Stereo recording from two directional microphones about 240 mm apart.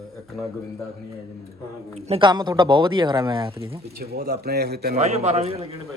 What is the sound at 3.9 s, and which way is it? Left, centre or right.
A man's voice, right.